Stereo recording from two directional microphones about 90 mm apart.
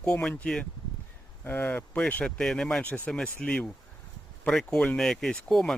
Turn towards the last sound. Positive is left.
turn(degrees=5)  # may be behind; listen again after turning